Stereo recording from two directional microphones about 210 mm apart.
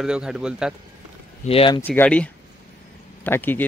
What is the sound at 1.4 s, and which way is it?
Speech, 25° left (ahead or behind).